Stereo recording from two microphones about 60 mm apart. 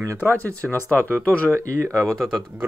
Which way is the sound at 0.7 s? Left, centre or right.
Left.